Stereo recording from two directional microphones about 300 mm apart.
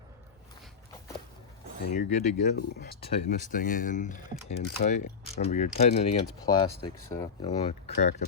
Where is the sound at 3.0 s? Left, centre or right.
Left.